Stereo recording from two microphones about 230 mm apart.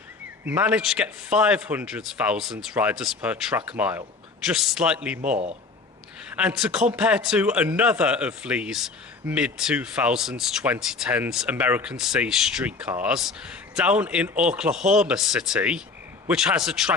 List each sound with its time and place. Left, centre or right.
0.4 s speech: centre
5.2 s speech: right
6.3 s speech: centre